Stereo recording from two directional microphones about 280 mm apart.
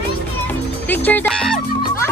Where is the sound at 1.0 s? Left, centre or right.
Centre.